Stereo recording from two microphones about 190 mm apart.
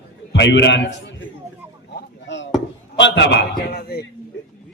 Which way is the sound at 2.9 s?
70° left (ahead or behind).